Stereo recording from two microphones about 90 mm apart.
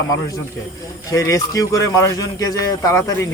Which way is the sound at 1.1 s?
40° left (ahead or behind).